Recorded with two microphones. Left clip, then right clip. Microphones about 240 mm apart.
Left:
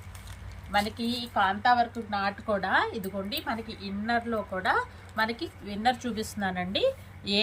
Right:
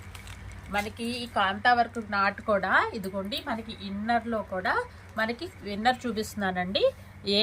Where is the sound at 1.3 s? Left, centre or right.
Centre.